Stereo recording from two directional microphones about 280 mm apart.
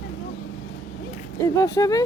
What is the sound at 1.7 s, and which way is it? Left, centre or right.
Speech, centre.